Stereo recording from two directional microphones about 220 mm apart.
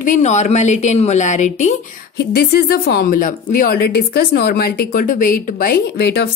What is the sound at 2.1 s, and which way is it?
Speech, 45° left (ahead or behind).